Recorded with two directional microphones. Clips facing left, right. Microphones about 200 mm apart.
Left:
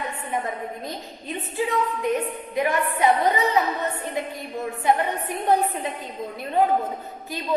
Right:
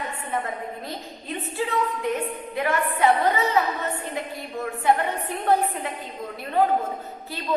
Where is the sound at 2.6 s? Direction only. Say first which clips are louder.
Left 1 dB; 15° left (ahead or behind).